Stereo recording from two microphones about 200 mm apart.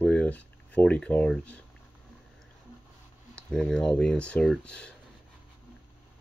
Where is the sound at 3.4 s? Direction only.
5° left (ahead or behind).